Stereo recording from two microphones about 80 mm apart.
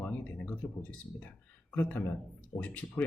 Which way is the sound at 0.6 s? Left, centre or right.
Left.